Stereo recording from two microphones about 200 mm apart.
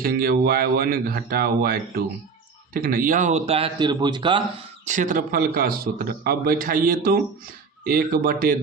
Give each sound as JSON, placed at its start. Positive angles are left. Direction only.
{"t": 0.0, "sound": "a man's voice", "side_deg": -50}
{"t": 4.9, "sound": "a man's voice", "side_deg": -40}